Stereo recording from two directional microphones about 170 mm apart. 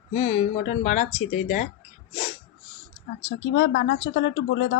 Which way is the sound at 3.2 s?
90° left.